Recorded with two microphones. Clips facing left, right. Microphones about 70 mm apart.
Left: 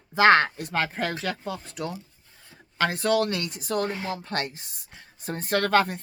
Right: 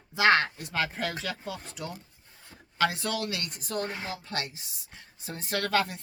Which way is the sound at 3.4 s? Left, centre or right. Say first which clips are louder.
Left 6 dB; right.